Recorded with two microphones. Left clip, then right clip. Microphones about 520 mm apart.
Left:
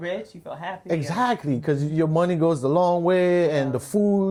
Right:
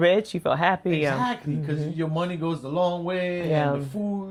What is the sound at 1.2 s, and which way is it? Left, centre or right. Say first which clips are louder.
A man's voice: left 4 dB; left.